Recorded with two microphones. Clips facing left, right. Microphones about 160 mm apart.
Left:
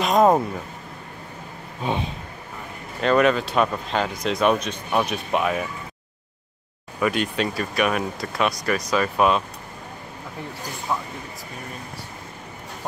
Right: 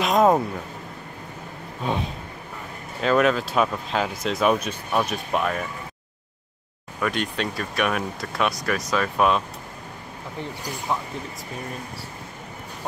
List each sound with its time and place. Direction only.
0.0 s a sound: centre (ahead or behind)
3.0 s speech: centre (ahead or behind)
7.0 s speech: 5° left (ahead or behind)
10.9 s speech: centre (ahead or behind)